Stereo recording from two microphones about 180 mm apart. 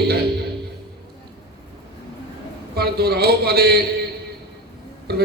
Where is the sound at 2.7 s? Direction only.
60° right (ahead or behind).